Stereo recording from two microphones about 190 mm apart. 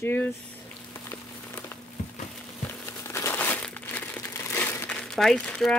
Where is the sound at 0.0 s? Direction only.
10° left (ahead or behind).